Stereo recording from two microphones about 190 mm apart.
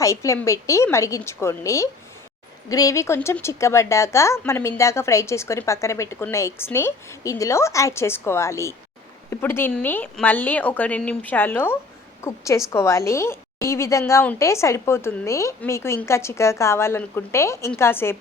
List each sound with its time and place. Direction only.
0.0 s a woman's voice: 15° left (ahead or behind)